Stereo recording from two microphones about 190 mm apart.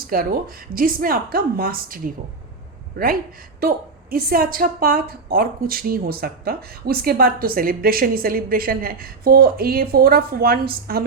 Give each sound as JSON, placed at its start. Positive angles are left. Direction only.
{"t": 0.1, "sound": "a woman's voice", "side_deg": -50}